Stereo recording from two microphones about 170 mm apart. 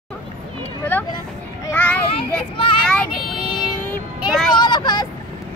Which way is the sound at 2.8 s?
5° left (ahead or behind).